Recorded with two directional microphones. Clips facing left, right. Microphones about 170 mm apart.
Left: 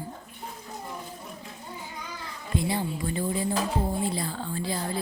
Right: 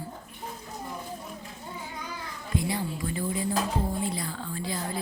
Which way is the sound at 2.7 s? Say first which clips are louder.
Left 2 dB; 30° left (ahead or behind).